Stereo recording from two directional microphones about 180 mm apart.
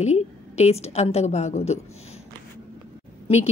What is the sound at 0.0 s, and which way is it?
A woman's voice, 40° left (ahead or behind).